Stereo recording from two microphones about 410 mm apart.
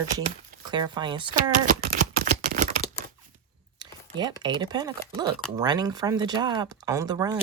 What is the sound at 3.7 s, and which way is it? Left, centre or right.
Speech, centre.